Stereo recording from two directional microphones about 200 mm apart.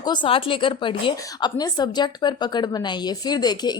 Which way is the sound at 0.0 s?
20° left (ahead or behind).